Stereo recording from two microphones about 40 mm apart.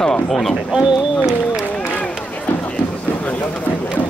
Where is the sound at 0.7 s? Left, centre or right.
Centre.